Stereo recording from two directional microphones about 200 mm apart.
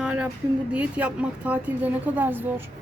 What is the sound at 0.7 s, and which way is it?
A woman's voice, 5° right (ahead or behind).